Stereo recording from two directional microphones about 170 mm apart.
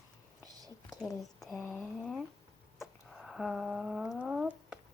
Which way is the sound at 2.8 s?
Centre (ahead or behind).